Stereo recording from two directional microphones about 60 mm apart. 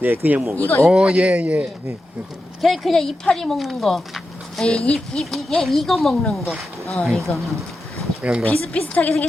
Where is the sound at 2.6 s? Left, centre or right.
Centre.